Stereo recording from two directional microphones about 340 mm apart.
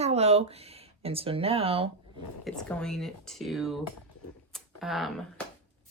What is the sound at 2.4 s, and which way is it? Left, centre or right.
Speech, centre.